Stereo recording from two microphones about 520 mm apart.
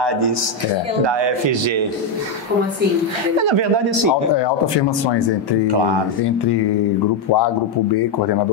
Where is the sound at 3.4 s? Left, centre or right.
Right.